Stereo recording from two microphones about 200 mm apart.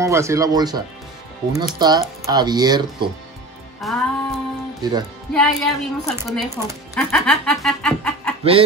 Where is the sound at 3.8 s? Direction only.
Centre (ahead or behind).